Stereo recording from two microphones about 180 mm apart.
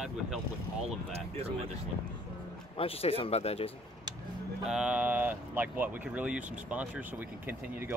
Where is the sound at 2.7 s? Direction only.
30° left (ahead or behind).